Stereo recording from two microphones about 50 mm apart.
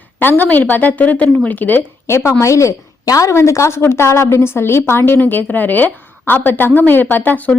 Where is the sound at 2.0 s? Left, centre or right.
Left.